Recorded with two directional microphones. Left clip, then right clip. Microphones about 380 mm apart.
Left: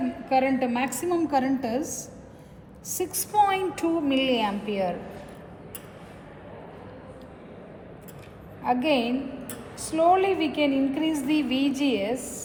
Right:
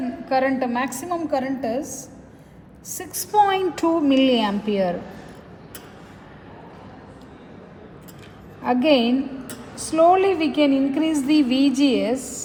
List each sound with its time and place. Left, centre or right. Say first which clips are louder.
0.3 s a woman's voice: right 3 dB; right
1.4 s a woman's voice: right 1 dB; centre
3.2 s a woman's voice: right 5 dB; right
8.6 s a woman's voice: right 6 dB; right